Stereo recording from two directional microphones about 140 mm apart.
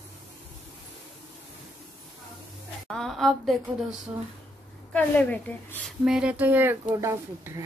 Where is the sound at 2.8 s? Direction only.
5° left (ahead or behind).